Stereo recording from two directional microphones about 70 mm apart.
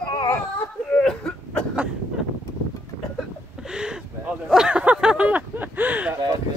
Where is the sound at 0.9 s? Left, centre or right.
Centre.